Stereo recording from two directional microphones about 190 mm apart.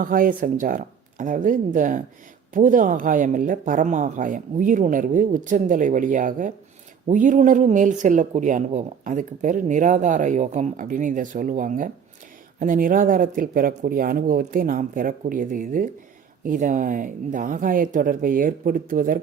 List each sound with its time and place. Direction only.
0.0 s speech: 45° right (ahead or behind)